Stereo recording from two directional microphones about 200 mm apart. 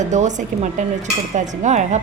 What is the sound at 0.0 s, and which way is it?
A woman's voice, 35° right (ahead or behind).